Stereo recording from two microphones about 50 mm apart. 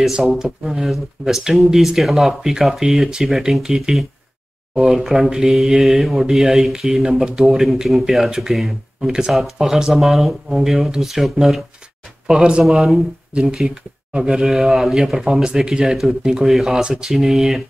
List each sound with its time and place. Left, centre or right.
0.0 s speech: centre
12.3 s speech: centre
12.6 s speech: centre
14.5 s speech: centre